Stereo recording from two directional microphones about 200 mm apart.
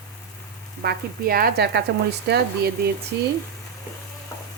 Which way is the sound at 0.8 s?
50° right (ahead or behind).